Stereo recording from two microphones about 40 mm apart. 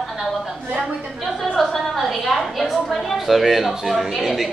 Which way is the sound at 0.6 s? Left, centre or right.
Right.